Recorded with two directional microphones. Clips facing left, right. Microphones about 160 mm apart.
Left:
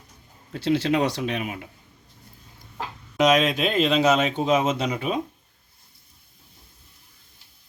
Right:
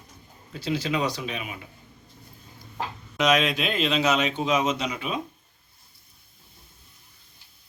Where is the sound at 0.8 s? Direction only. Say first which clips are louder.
Left 5 dB; 65° left (ahead or behind).